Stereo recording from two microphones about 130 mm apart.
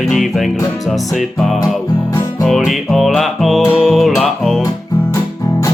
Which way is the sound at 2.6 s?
Centre (ahead or behind).